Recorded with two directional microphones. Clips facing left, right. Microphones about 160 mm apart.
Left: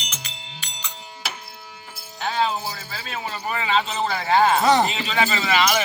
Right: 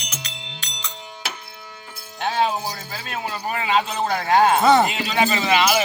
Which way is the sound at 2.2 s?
45° right (ahead or behind).